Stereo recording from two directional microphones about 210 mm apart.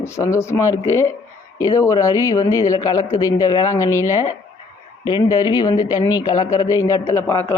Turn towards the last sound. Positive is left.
turn(degrees=10)  # may be behind; listen again after turning